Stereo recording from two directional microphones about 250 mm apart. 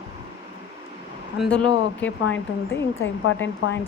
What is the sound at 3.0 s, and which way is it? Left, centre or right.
Speech, left.